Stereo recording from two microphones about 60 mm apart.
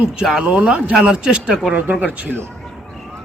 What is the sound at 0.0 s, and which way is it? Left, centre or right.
Speech, centre.